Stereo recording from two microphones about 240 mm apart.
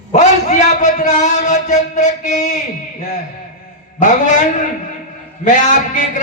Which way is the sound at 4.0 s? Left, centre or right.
Left.